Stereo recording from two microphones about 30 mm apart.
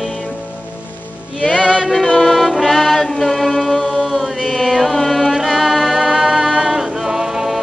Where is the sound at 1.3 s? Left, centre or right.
Left.